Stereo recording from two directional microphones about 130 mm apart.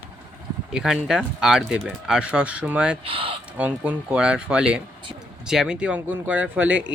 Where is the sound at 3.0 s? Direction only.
45° right (ahead or behind).